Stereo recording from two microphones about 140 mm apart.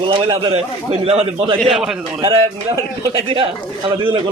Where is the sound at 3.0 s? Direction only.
35° right (ahead or behind).